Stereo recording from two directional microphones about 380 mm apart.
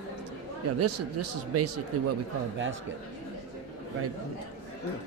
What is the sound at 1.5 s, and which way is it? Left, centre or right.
Speech, right.